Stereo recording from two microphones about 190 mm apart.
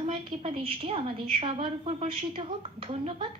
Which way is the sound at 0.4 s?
30° right (ahead or behind).